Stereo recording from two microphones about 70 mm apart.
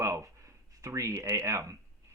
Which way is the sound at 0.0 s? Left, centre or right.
Right.